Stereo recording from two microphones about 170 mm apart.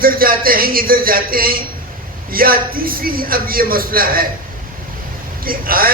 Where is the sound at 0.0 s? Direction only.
60° right (ahead or behind).